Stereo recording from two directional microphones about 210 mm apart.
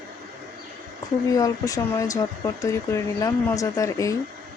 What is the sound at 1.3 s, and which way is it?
Speech, 15° left (ahead or behind).